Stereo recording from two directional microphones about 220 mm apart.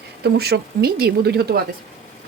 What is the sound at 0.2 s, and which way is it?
A woman's voice, 45° right (ahead or behind).